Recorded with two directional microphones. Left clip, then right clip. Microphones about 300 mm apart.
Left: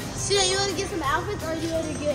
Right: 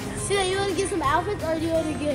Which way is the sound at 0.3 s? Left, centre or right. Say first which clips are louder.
Left 1 dB; centre.